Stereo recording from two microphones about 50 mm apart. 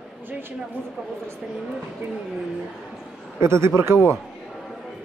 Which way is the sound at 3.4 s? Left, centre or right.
Right.